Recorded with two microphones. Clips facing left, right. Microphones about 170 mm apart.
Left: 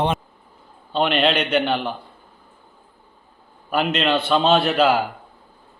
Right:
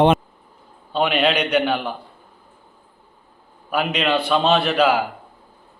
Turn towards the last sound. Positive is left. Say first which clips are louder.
# even
turn(degrees=0)  # may be behind; listen again after turning